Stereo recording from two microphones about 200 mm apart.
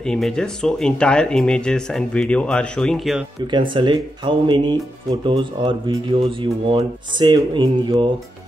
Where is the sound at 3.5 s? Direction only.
25° right (ahead or behind).